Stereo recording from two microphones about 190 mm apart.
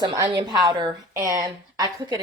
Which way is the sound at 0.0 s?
20° right (ahead or behind).